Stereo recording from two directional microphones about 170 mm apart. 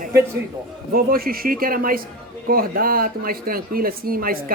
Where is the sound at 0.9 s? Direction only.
60° right (ahead or behind).